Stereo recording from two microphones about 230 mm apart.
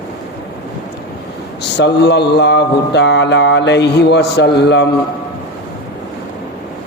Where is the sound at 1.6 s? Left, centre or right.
Left.